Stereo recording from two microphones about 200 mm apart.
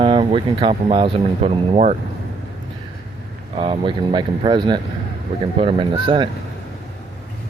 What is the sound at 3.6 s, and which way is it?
Speech, 25° right (ahead or behind).